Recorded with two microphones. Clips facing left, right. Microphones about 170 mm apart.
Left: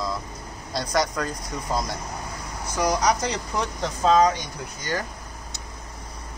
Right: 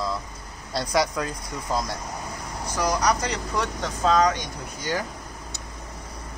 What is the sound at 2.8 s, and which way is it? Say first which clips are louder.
Speech: left 1 dB; 15° left (ahead or behind).